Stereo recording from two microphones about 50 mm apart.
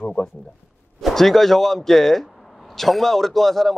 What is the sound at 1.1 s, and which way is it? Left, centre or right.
A man's voice, centre.